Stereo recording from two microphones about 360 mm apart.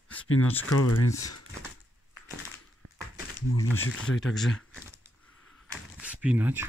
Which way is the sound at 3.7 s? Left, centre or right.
Centre.